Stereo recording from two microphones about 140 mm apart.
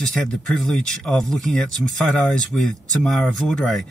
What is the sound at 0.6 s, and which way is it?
Speech, 5° left (ahead or behind).